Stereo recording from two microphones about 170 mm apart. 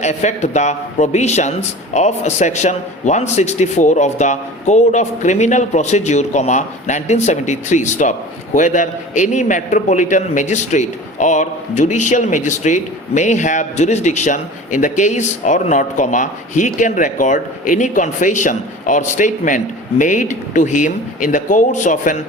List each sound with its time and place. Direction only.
0.0 s a man's voice: 45° left (ahead or behind)